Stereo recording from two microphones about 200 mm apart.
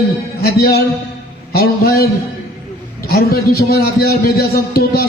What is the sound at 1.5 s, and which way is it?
Speech, 50° left (ahead or behind).